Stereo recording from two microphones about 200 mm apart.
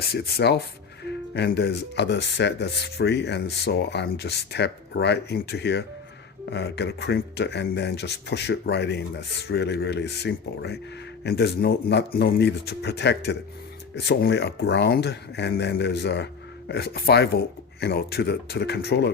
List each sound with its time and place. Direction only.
0.0 s speech: 55° left (ahead or behind)